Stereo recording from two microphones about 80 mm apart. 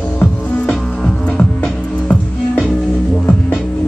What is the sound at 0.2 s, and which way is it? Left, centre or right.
Music, centre.